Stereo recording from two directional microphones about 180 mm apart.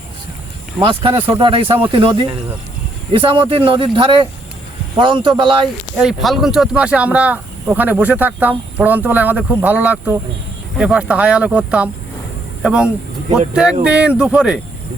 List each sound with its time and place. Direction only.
0.8 s speech: 30° right (ahead or behind)
6.0 s speech: centre (ahead or behind)